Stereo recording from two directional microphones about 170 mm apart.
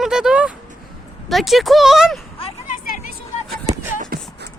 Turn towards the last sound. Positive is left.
turn(degrees=-55)  # may be behind; listen again after turning